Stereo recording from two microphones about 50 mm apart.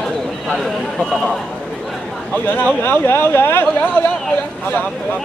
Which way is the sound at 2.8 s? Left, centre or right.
Left.